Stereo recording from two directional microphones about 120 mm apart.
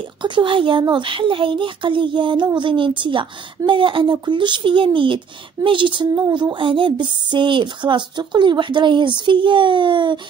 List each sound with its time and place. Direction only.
0.2 s speech: 45° right (ahead or behind)